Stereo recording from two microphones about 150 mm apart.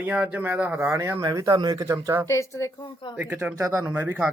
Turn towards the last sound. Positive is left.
turn(degrees=-10)  # may be behind; listen again after turning